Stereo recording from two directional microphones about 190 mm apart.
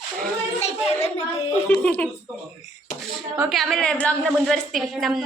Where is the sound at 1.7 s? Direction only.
5° left (ahead or behind).